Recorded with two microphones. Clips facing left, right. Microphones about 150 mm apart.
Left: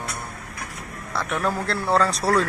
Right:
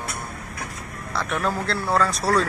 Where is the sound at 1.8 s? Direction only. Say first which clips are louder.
Left 2 dB; 20° left (ahead or behind).